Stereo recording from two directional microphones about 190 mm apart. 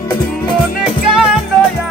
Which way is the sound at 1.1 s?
5° right (ahead or behind).